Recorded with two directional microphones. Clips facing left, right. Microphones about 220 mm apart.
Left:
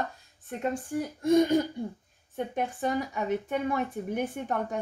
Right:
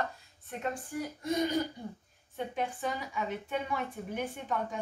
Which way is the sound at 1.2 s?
45° left (ahead or behind).